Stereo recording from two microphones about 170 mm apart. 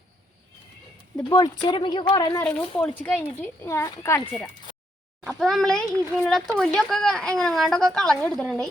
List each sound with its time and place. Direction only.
1.1 s speech: 25° left (ahead or behind)
2.4 s a child's voice: 5° left (ahead or behind)
5.2 s speech: centre (ahead or behind)